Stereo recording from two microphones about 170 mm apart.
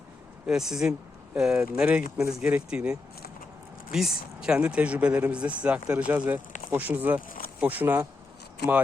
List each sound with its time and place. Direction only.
0.4 s speech: 5° right (ahead or behind)
7.3 s a sound: 55° left (ahead or behind)
7.6 s speech: 10° right (ahead or behind)